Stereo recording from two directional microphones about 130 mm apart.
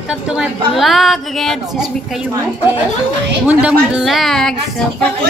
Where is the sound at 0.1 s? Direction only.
5° right (ahead or behind).